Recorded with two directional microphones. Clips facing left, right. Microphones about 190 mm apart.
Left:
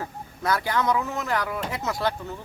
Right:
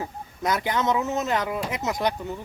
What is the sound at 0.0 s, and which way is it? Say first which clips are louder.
Speech: right 1 dB; 20° right (ahead or behind).